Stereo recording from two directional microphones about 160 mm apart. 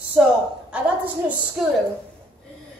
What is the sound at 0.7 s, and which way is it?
Speech, 10° right (ahead or behind).